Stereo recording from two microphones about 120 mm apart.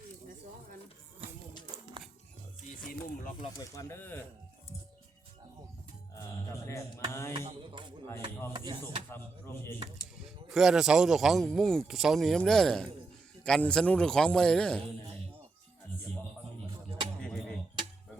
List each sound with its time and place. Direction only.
3.6 s speech: 25° left (ahead or behind)
6.7 s speech: 25° left (ahead or behind)
7.3 s speech: 60° right (ahead or behind)
8.5 s speech: 40° right (ahead or behind)
9.1 s speech: 20° left (ahead or behind)
10.5 s a man's voice: 5° right (ahead or behind)
17.2 s a sound: 5° left (ahead or behind)